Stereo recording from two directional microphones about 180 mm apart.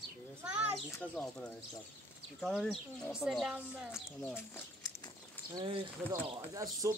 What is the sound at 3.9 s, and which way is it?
Speech, 10° left (ahead or behind).